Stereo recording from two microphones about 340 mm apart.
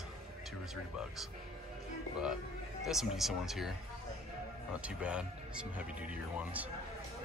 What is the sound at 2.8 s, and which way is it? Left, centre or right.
Speech, centre.